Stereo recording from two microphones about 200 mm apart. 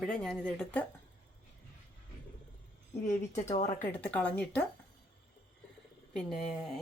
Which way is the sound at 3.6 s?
30° left (ahead or behind).